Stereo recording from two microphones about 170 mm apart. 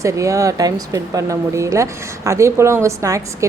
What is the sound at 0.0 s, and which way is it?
Speech, 20° right (ahead or behind).